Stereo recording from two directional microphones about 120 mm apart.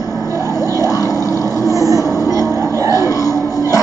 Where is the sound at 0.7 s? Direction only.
25° left (ahead or behind).